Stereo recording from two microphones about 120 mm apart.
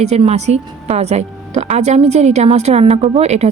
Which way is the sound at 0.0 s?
60° right (ahead or behind).